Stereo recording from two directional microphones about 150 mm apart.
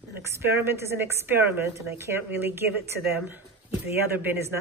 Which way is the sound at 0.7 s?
15° right (ahead or behind).